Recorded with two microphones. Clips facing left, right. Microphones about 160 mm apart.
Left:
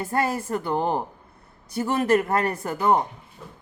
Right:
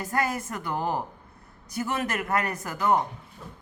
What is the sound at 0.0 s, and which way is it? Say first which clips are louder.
A man's voice: left 3 dB; 30° left (ahead or behind).